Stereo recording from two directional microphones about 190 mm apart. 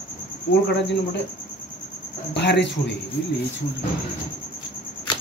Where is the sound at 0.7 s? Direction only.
65° left (ahead or behind).